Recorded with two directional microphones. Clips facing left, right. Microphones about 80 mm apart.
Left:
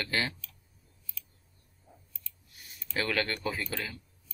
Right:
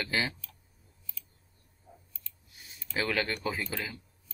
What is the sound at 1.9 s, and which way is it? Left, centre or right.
Scissors, centre.